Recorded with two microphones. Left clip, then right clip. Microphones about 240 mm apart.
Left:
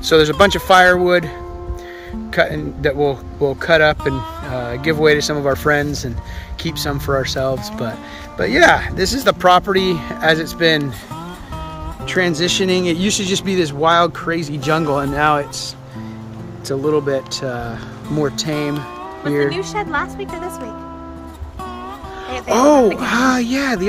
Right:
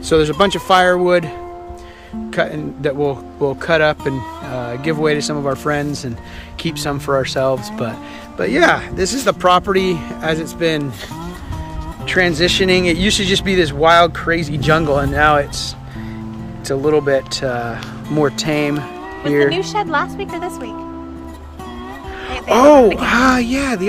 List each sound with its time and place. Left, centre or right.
0.0 s speech: centre
2.3 s speech: centre
12.1 s speech: centre
19.5 s a woman's voice: right
22.3 s speech: centre